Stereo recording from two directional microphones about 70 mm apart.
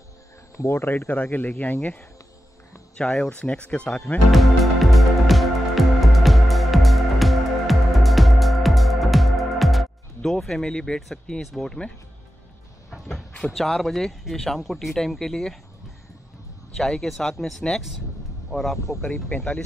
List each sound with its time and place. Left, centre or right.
0.6 s speech: left
0.8 s speech: left
3.0 s speech: centre
4.3 s music: centre
11.4 s speech: centre
12.9 s a sound: centre
13.5 s speech: centre
16.7 s speech: centre
19.3 s speech: left